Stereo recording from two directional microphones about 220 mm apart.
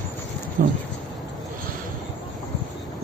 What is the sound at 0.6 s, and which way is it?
Speech, 40° right (ahead or behind).